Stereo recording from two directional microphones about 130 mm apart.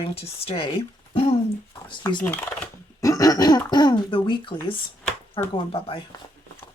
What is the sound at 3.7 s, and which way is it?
Speech, 35° left (ahead or behind).